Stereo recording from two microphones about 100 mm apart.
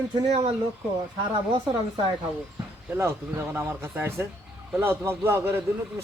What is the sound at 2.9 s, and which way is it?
Speech, 30° right (ahead or behind).